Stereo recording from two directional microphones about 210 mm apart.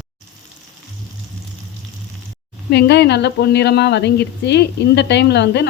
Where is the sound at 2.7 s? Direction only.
55° left (ahead or behind).